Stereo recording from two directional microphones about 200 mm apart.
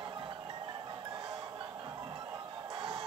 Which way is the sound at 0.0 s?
25° right (ahead or behind).